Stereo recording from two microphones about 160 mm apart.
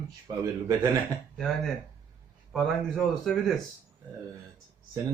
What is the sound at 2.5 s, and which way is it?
Speech, centre (ahead or behind).